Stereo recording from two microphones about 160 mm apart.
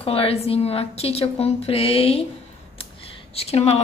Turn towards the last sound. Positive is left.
turn(degrees=40)  # may be behind; listen again after turning